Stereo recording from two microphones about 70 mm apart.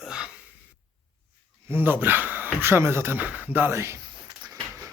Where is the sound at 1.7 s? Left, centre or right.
Right.